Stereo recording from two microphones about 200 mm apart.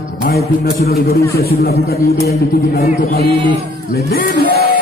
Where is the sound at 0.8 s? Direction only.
50° left (ahead or behind).